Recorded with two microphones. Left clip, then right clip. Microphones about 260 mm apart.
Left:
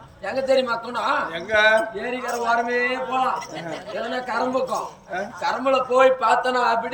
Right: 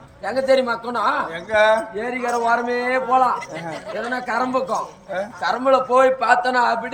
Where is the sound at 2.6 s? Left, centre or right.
Left.